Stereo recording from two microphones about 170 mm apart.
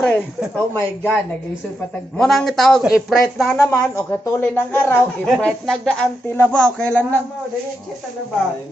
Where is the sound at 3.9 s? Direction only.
15° left (ahead or behind).